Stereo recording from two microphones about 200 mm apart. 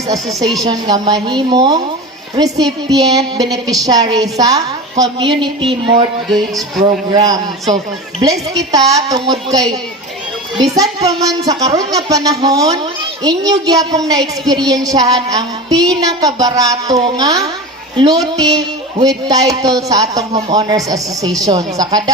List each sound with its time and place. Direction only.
0.1 s speech: 15° right (ahead or behind)
6.3 s speech: centre (ahead or behind)
7.1 s speech: 20° right (ahead or behind)